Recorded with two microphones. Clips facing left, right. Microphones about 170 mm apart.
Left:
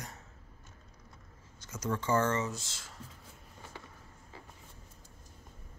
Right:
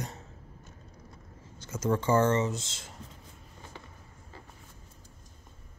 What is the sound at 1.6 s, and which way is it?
Speech, 30° right (ahead or behind).